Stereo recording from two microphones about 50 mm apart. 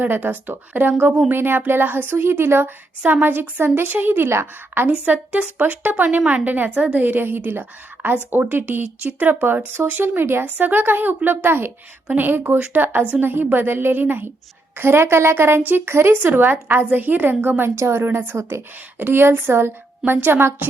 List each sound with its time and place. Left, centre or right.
0.0 s a woman's voice: right
3.0 s a woman's voice: right
5.0 s a woman's voice: right
7.0 s a woman's voice: right
10.4 s a woman's voice: right
11.4 s speech: right
12.1 s a woman's voice: right
14.8 s speech: right
17.7 s speech: right
18.3 s a woman's voice: right
18.9 s a woman's voice: right